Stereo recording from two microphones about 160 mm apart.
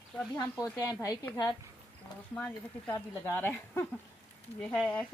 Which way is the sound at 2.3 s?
10° left (ahead or behind).